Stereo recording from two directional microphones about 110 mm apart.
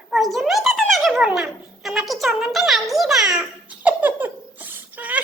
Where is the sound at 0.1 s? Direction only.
Centre (ahead or behind).